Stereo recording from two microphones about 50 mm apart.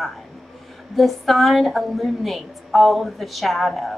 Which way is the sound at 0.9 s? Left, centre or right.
Centre.